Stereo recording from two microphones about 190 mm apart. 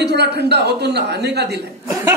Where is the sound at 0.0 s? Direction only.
60° right (ahead or behind).